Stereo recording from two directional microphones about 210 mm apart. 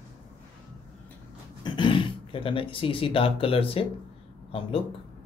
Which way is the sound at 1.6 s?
20° left (ahead or behind).